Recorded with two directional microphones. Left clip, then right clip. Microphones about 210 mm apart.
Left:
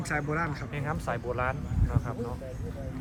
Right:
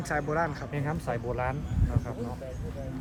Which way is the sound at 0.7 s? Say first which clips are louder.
Even; 30° right (ahead or behind).